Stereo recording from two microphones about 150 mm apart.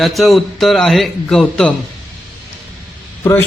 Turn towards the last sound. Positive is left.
turn(degrees=20)  # may be behind; listen again after turning